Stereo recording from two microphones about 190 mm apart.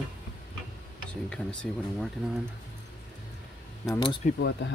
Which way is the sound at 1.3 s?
5° left (ahead or behind).